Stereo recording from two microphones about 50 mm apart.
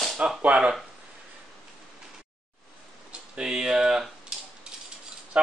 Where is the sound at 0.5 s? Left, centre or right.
Right.